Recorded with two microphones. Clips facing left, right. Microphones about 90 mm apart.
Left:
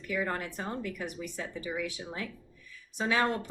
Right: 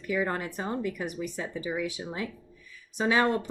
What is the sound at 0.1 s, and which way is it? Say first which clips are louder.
Speech: right 4 dB; 20° right (ahead or behind).